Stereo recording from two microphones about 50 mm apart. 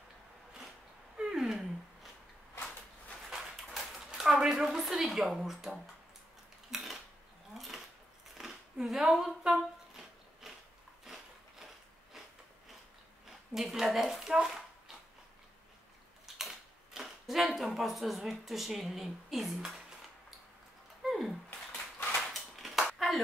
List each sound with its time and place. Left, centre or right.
1.1 s a sound: centre
3.3 s dog: centre
4.7 s a woman's voice: centre
6.7 s cutlery: centre
7.5 s a sound: centre
13.6 s speech: centre
16.3 s typewriter: centre
17.6 s a woman's voice: centre
21.0 s a sound: centre